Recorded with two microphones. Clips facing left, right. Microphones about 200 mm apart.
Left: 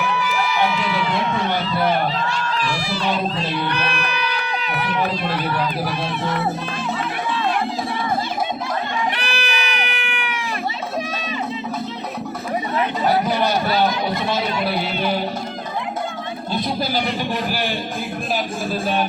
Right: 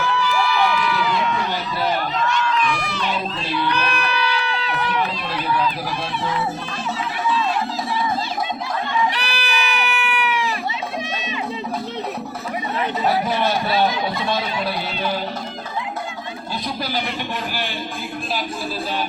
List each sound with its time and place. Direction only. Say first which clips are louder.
0.0 s crowd: right 1 dB; 20° left (ahead or behind)
7.3 s run: right 2 dB; 60° left (ahead or behind)
9.1 s goat: even; 55° left (ahead or behind)
13.4 s a sound: left 1 dB; centre (ahead or behind)